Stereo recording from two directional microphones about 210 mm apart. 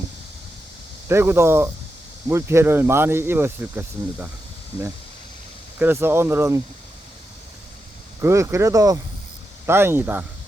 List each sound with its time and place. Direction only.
1.0 s speech: 10° right (ahead or behind)
5.8 s speech: 10° right (ahead or behind)
8.2 s speech: 15° right (ahead or behind)